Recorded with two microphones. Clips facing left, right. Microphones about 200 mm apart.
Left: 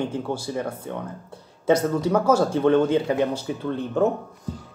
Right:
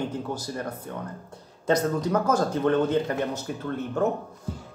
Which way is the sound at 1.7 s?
10° left (ahead or behind).